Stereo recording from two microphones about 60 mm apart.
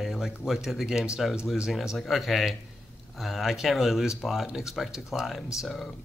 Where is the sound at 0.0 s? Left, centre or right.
Centre.